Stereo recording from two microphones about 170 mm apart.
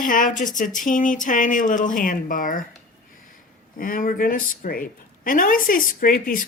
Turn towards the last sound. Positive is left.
turn(degrees=55)  # may be behind; listen again after turning